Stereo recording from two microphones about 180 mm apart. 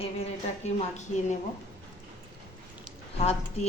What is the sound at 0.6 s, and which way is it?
Speech, 40° left (ahead or behind).